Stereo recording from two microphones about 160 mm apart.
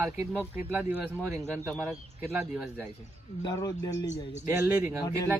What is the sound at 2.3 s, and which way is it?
Speech, 10° right (ahead or behind).